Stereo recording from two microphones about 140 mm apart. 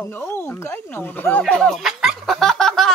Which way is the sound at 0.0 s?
15° left (ahead or behind).